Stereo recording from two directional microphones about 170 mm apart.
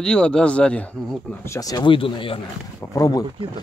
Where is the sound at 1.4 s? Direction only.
20° left (ahead or behind).